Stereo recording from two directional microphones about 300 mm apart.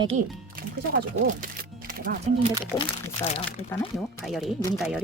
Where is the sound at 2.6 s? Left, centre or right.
Centre.